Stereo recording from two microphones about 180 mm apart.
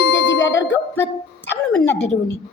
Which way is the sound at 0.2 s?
90° left.